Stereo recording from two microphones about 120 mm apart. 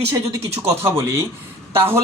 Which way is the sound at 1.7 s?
20° right (ahead or behind).